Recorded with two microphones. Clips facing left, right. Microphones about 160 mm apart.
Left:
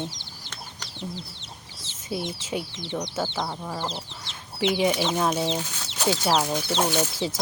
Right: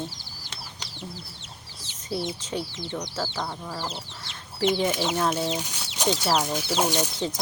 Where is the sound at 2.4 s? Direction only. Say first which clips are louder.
Even; 10° left (ahead or behind).